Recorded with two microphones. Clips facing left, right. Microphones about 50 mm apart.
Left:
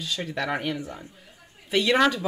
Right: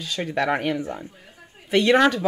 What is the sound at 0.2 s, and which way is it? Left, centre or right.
Speech, centre.